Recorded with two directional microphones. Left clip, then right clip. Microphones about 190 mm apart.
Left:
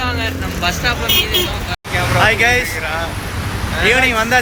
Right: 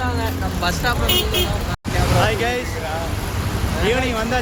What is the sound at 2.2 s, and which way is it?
Speech, 15° left (ahead or behind).